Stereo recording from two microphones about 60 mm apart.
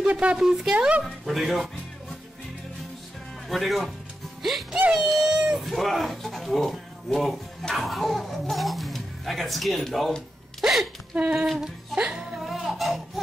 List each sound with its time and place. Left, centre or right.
0.1 s speech: right
0.4 s speech: centre
0.7 s speech: right
1.2 s speech: centre
3.4 s speech: centre
5.6 s speech: centre
11.1 s speech: right
12.4 s speech: centre